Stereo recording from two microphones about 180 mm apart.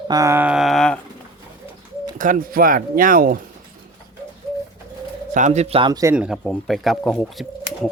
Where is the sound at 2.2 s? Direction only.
50° right (ahead or behind).